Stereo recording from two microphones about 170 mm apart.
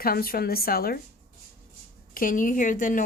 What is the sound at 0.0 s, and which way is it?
Speech, 60° left (ahead or behind).